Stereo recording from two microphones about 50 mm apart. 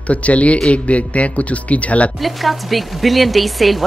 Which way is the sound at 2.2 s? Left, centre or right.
Centre.